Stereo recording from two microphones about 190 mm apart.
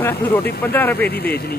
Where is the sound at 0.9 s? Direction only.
55° left (ahead or behind).